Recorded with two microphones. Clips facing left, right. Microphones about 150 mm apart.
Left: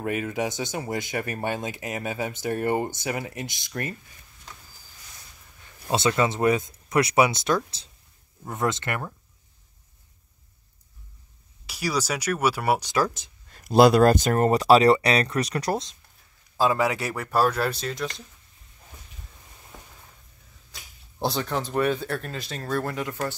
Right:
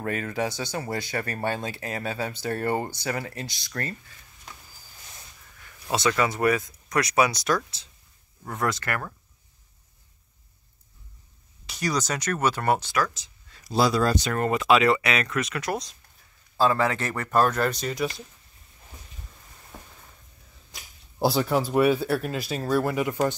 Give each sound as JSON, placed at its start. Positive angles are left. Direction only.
{"t": 0.0, "sound": "speech", "side_deg": 15}
{"t": 5.6, "sound": "speech", "side_deg": 25}
{"t": 11.6, "sound": "speech", "side_deg": 5}
{"t": 13.1, "sound": "speech", "side_deg": 50}
{"t": 16.5, "sound": "speech", "side_deg": 10}
{"t": 21.2, "sound": "speech", "side_deg": -5}